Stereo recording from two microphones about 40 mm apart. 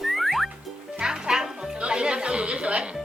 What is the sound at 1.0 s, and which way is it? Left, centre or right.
Music, centre.